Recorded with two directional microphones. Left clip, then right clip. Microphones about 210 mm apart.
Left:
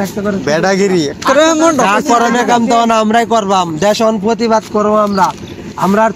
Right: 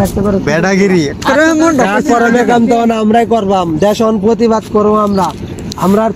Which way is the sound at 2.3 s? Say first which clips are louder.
Right 1 dB; 50° left (ahead or behind).